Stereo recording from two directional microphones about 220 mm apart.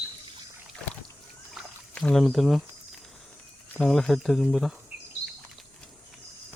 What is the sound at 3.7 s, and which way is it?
Speech, centre (ahead or behind).